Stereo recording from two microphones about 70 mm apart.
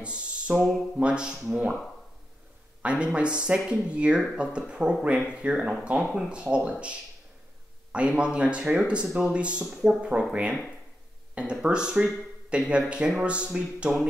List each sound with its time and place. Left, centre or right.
0.0 s music: centre
0.9 s speech: centre
2.8 s speech: centre